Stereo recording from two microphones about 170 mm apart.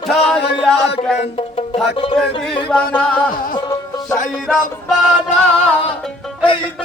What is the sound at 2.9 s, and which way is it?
Speech, 10° left (ahead or behind).